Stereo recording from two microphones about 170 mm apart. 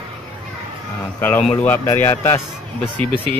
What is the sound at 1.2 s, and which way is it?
Speech, 10° left (ahead or behind).